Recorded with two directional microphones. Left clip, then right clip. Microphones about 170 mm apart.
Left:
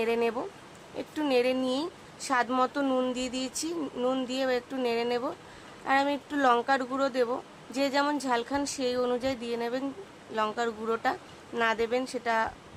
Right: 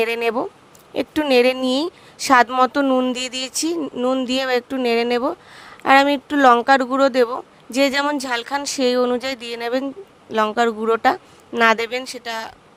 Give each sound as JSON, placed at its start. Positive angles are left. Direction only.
{"t": 0.0, "sound": "speech", "side_deg": -55}
{"t": 3.2, "sound": "speech", "side_deg": -55}
{"t": 3.8, "sound": "speech", "side_deg": -35}